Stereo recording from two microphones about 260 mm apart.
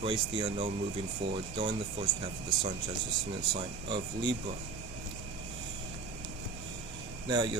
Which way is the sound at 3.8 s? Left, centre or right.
Centre.